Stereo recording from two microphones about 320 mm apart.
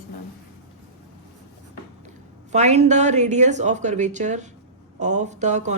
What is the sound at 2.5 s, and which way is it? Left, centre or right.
A woman's voice, right.